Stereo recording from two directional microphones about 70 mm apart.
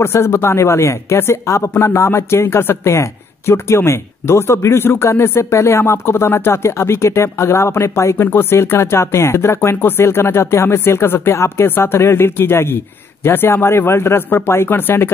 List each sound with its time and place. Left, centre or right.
0.0 s speech: left